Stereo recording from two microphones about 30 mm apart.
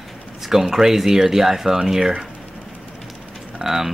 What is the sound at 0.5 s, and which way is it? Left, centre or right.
Speech, centre.